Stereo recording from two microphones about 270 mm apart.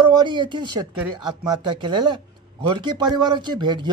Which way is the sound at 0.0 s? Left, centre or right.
Centre.